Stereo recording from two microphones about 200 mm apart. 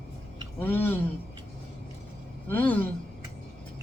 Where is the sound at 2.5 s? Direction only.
10° left (ahead or behind).